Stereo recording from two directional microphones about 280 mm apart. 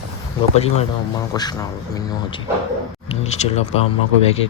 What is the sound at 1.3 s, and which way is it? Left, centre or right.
Speech, centre.